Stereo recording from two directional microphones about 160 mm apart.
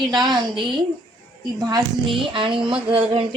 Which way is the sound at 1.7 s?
30° right (ahead or behind).